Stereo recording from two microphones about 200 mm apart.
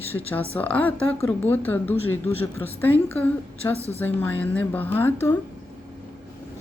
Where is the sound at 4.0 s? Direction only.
10° left (ahead or behind).